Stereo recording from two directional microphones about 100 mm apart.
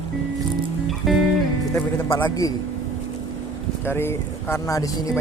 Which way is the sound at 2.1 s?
30° left (ahead or behind).